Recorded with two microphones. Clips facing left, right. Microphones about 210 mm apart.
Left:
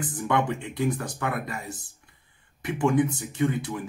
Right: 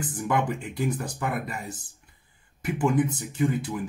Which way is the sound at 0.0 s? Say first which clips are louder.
Left 1 dB; centre (ahead or behind).